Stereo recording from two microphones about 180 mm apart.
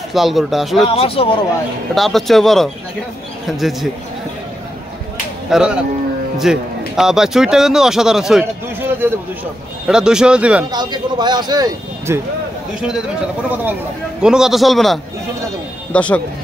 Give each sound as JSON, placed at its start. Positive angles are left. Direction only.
{"t": 0.1, "sound": "speech", "side_deg": 0}
{"t": 0.8, "sound": "speech", "side_deg": 30}
{"t": 2.0, "sound": "speech", "side_deg": 0}
{"t": 5.5, "sound": "speech", "side_deg": -5}
{"t": 10.7, "sound": "a man's voice", "side_deg": -25}
{"t": 14.2, "sound": "speech", "side_deg": -5}